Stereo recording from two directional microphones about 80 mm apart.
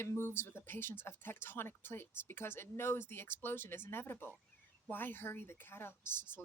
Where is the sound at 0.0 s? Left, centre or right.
Left.